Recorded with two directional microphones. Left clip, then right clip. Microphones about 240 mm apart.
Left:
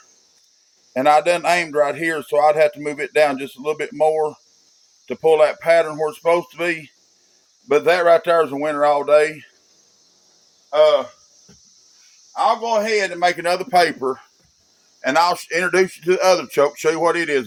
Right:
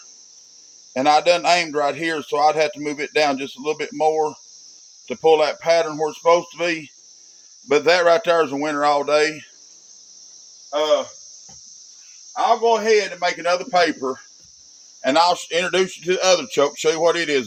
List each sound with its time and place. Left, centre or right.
0.9 s a man's voice: centre
10.7 s speech: left
13.1 s speech: left
15.0 s speech: centre